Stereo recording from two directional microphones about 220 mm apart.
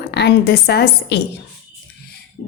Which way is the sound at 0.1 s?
50° left (ahead or behind).